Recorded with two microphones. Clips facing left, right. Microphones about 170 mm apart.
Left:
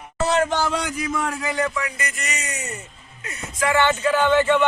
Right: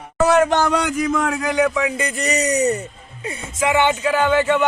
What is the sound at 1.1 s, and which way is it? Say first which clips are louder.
Speech: right 5 dB; 90° right.